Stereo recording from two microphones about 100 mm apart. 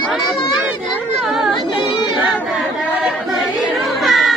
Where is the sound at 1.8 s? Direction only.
50° left (ahead or behind).